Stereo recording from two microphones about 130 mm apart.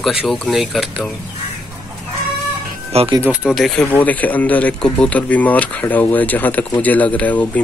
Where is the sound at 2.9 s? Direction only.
50° right (ahead or behind).